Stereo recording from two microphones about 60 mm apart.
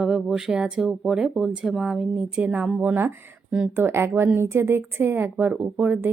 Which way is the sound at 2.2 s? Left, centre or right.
Centre.